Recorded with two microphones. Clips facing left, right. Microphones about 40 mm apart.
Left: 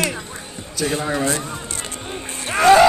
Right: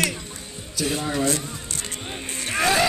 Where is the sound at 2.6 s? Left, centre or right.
Centre.